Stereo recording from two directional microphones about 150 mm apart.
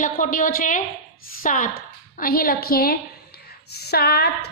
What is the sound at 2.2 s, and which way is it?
Speech, 80° left.